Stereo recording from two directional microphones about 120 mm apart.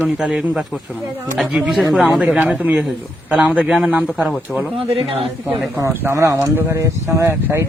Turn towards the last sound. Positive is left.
turn(degrees=-20)  # may be behind; listen again after turning